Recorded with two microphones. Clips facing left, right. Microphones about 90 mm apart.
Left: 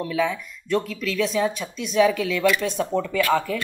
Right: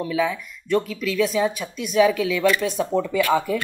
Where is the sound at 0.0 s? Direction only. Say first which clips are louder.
Right 1 dB; 5° right (ahead or behind).